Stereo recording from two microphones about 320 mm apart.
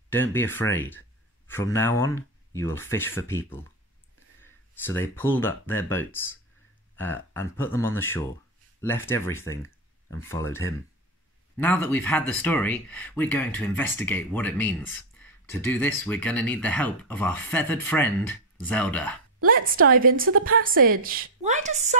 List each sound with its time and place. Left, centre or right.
0.1 s speech: centre
19.4 s a woman's voice: right